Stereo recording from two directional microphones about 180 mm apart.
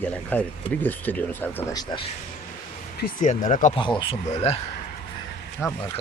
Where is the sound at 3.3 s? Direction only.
40° left (ahead or behind).